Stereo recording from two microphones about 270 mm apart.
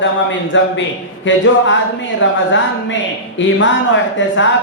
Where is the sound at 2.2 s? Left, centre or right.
Left.